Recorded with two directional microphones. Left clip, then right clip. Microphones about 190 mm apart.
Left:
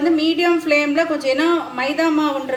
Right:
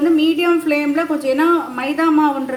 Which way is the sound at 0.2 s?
45° right (ahead or behind).